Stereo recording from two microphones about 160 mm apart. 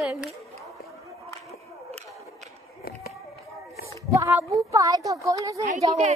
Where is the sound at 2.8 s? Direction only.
70° left (ahead or behind).